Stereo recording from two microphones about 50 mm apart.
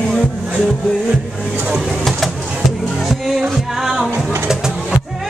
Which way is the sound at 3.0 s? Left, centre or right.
Centre.